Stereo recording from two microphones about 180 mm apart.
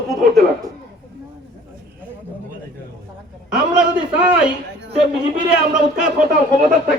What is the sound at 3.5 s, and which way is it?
A man's voice, 5° right (ahead or behind).